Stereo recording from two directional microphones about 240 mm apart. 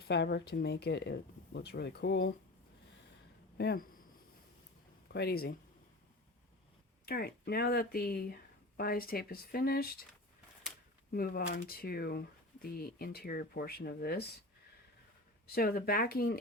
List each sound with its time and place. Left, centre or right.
0.1 s speech: left
3.6 s speech: left
5.0 s speech: left
7.0 s speech: left
11.1 s speech: left
15.4 s speech: left